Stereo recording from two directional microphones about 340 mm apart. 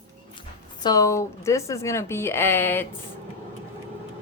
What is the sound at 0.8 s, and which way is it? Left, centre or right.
Speech, centre.